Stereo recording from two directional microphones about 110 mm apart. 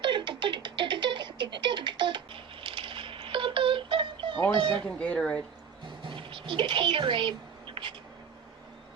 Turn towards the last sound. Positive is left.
turn(degrees=-50)  # may be behind; listen again after turning